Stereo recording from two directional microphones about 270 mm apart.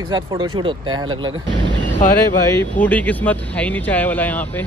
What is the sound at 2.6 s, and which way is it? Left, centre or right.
Speech, centre.